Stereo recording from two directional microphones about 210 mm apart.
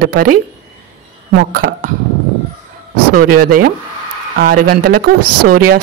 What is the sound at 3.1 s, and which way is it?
Speech, 45° right (ahead or behind).